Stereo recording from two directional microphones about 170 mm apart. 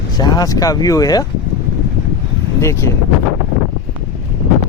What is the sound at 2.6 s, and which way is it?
Speech, 15° left (ahead or behind).